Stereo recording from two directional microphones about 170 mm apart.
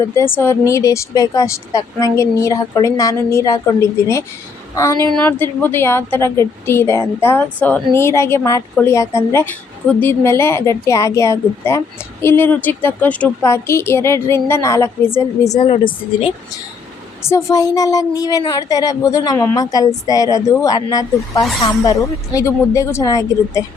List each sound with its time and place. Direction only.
0.1 s a woman's voice: 15° left (ahead or behind)
17.2 s speech: 20° left (ahead or behind)